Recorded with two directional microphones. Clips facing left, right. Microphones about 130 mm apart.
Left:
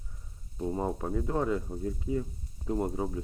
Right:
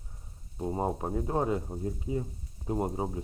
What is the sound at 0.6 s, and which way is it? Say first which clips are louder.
Speech: right 1 dB; 30° right (ahead or behind).